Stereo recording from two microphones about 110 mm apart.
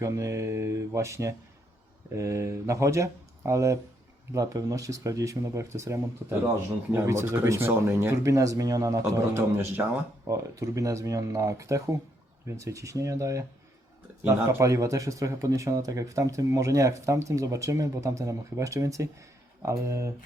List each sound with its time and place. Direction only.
0.0 s speech: 30° right (ahead or behind)
10.2 s speech: 30° right (ahead or behind)
14.1 s speech: 15° right (ahead or behind)
14.6 s speech: 30° right (ahead or behind)